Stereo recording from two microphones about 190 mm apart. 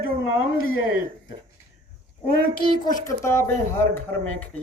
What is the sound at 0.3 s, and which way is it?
Speech, 90° left.